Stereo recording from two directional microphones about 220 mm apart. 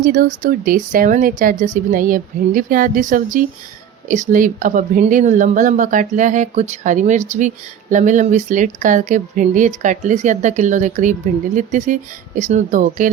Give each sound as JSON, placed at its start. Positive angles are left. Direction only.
{"t": 0.0, "sound": "speech", "side_deg": -40}